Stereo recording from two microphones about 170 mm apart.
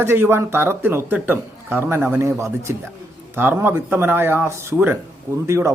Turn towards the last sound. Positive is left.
turn(degrees=-15)  # may be behind; listen again after turning